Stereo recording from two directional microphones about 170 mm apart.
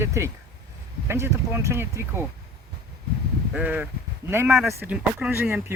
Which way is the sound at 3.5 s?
10° right (ahead or behind).